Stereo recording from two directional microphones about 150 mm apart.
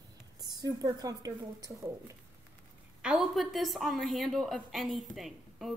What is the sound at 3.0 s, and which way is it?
A woman's voice, centre (ahead or behind).